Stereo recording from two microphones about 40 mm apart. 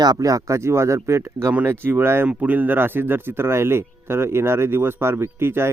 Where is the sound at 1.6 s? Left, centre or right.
Right.